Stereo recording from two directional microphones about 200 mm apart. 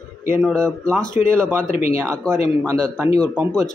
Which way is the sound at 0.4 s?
5° left (ahead or behind).